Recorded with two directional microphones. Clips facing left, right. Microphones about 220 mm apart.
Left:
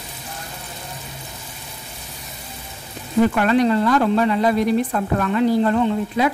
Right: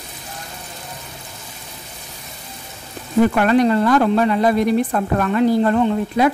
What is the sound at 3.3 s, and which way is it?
Speech, 45° right (ahead or behind).